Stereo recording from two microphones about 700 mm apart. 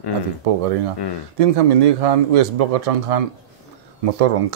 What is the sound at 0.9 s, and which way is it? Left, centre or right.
Speech, left.